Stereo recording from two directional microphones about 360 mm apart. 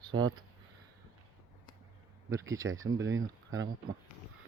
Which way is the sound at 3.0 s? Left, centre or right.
Right.